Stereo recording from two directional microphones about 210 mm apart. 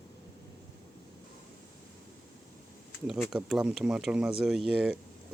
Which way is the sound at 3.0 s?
Centre (ahead or behind).